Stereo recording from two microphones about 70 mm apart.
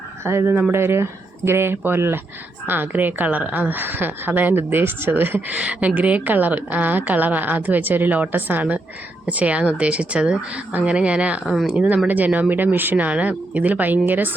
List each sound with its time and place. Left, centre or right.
0.3 s a woman's voice: right; by 11.3 s centre
11.4 s speech: centre
11.7 s a woman's voice: centre